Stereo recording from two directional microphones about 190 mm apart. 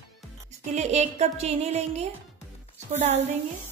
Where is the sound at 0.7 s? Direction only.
35° right (ahead or behind).